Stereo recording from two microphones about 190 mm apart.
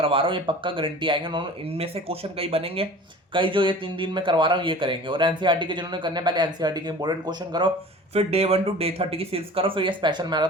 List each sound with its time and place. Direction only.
0.0 s speech: 25° right (ahead or behind)